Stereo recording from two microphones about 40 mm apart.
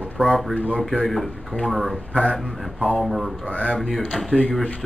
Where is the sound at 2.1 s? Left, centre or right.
Left.